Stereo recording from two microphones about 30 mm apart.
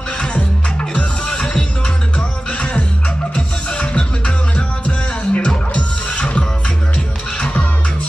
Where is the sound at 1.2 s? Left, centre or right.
Left.